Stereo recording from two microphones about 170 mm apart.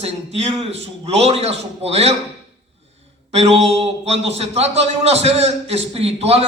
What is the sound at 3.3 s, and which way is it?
Mantra, 40° right (ahead or behind).